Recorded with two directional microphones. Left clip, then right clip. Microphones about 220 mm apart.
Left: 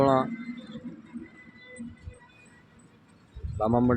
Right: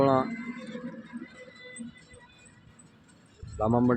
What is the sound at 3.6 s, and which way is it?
Speech, centre (ahead or behind).